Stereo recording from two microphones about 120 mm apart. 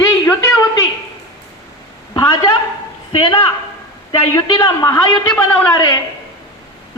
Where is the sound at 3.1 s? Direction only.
50° left (ahead or behind).